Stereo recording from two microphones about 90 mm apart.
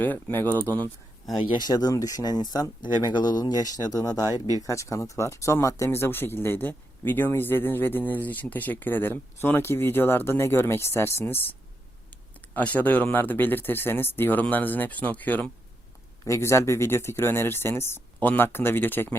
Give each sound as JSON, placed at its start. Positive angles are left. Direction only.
{"t": 0.0, "sound": "speech", "side_deg": 20}
{"t": 1.4, "sound": "speech", "side_deg": 55}
{"t": 16.2, "sound": "speech", "side_deg": 30}